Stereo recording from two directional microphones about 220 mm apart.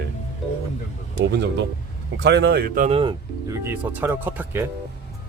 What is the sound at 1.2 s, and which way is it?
Speech, 50° right (ahead or behind).